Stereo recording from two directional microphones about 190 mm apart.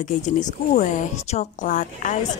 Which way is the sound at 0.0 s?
40° left (ahead or behind).